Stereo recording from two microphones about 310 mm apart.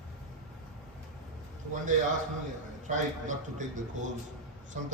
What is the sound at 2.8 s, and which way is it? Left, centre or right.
Speech, right.